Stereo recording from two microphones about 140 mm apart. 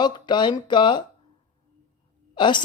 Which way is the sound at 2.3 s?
35° left (ahead or behind).